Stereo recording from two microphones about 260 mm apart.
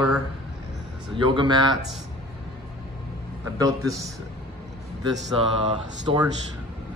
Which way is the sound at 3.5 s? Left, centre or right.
Centre.